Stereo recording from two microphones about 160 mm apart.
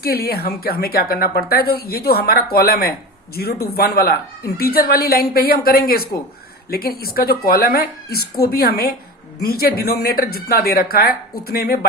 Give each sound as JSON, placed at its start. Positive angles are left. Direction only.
{"t": 0.0, "sound": "a woman's voice", "side_deg": 70}